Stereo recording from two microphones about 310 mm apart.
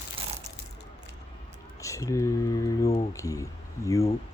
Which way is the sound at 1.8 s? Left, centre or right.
Centre.